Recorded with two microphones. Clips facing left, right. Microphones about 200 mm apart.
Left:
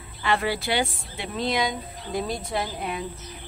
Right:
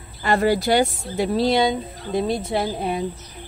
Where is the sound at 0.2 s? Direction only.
40° right (ahead or behind).